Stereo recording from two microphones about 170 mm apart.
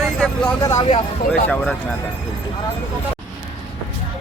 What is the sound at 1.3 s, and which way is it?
Speech, 5° left (ahead or behind).